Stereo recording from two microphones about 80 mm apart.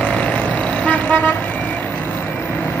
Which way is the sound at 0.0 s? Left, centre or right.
Centre.